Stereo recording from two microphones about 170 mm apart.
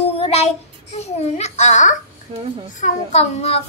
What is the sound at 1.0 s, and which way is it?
A child's voice, 40° left (ahead or behind).